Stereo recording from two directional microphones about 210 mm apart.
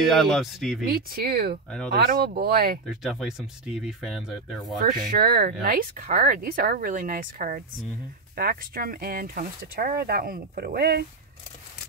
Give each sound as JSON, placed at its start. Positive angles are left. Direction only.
{"t": 0.0, "sound": "speech", "side_deg": 0}
{"t": 0.8, "sound": "speech", "side_deg": -45}
{"t": 2.9, "sound": "speech", "side_deg": 0}
{"t": 5.1, "sound": "speech", "side_deg": -45}